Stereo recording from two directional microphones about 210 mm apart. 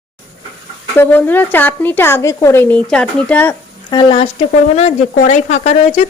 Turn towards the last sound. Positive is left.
turn(degrees=35)  # may be behind; listen again after turning